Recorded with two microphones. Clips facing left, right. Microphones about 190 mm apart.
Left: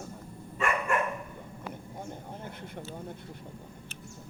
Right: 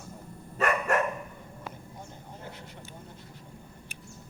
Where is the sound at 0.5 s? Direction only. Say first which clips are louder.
Right 3 dB; 40° right (ahead or behind).